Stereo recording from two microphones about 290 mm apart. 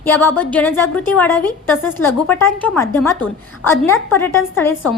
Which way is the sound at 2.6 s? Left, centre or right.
Centre.